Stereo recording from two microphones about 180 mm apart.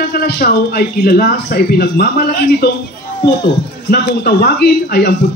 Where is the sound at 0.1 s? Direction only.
60° left (ahead or behind).